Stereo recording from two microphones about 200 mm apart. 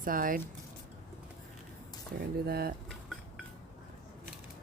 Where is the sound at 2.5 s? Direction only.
50° right (ahead or behind).